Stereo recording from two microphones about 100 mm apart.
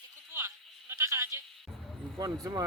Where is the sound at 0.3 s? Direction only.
25° right (ahead or behind).